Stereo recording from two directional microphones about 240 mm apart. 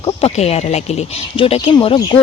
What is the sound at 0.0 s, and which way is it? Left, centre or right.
Speech, left.